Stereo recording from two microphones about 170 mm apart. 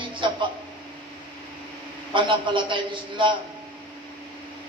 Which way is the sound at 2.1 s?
30° right (ahead or behind).